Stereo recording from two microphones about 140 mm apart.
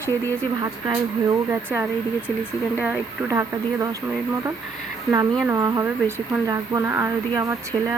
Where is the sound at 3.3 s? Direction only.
20° right (ahead or behind).